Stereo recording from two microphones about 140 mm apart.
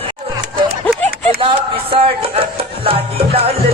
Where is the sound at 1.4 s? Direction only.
40° right (ahead or behind).